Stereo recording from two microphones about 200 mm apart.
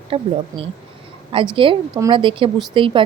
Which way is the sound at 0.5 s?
15° right (ahead or behind).